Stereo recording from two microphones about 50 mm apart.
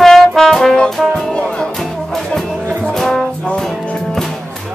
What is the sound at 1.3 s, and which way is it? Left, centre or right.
Music, centre.